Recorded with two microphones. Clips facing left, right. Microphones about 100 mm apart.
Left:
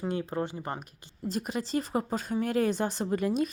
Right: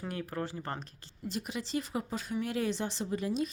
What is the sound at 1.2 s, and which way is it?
Speech, 40° left (ahead or behind).